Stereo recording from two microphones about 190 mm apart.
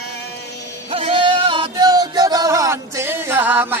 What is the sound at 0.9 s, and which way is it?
Music, 30° right (ahead or behind).